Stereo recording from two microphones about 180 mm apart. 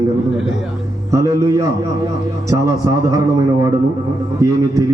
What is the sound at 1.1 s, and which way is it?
A man's voice, 15° right (ahead or behind).